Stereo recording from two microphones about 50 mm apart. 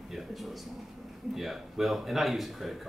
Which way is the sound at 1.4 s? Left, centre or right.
Centre.